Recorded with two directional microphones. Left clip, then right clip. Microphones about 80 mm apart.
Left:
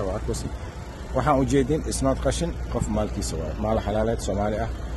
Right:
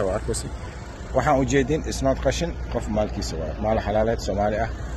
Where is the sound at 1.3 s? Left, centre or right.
Left.